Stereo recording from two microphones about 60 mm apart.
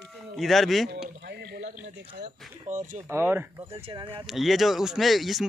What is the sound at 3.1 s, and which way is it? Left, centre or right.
Speech, right.